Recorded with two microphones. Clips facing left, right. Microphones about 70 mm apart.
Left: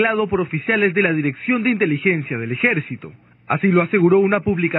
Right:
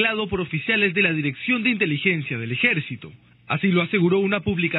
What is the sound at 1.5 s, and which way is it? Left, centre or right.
Speech, left.